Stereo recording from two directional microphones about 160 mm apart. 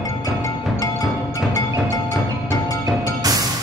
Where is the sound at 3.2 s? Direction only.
20° right (ahead or behind).